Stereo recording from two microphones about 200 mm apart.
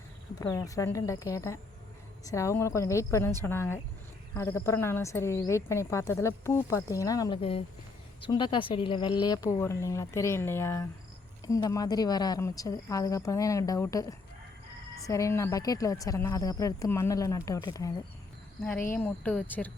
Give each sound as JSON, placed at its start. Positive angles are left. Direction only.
{"t": 0.3, "sound": "speech", "side_deg": 15}
{"t": 18.6, "sound": "speech", "side_deg": 10}